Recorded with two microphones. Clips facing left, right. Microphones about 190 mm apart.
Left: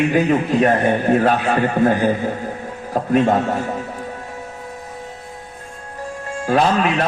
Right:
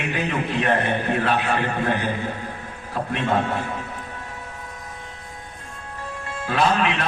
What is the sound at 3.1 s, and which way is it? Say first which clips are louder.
Speech: left 7 dB; 40° left (ahead or behind).